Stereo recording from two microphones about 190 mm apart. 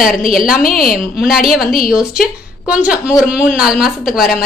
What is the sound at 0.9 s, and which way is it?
A woman's voice, centre (ahead or behind).